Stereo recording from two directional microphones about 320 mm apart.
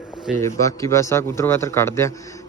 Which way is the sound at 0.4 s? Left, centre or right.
Centre.